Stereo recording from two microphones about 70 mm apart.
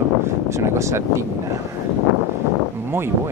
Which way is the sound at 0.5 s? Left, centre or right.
Right.